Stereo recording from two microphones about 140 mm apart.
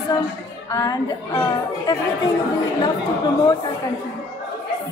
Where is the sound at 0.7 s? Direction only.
25° left (ahead or behind).